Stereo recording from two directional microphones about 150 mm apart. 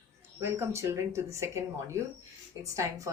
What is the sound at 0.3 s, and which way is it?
Speech, 15° right (ahead or behind).